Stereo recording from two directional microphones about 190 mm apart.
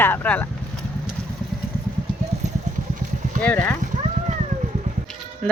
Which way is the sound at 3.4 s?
10° left (ahead or behind).